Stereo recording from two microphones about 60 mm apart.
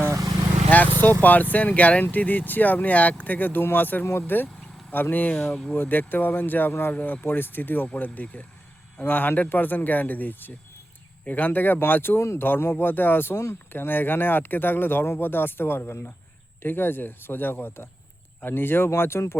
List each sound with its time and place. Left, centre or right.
0.1 s vehicle: right
0.7 s vehicle: left
1.2 s speech: left
5.4 s speech: centre
5.7 s speech: left